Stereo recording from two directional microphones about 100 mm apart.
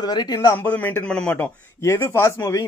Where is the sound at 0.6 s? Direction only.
15° left (ahead or behind).